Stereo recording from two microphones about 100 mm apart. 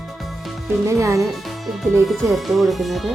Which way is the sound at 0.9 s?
30° right (ahead or behind).